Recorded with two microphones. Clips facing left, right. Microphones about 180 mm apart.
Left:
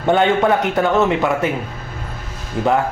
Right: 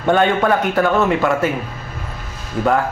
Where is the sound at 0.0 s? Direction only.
20° left (ahead or behind).